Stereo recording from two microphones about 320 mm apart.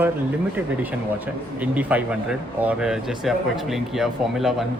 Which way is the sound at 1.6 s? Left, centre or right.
Centre.